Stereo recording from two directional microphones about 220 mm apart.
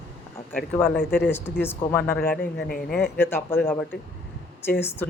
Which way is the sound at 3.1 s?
10° left (ahead or behind).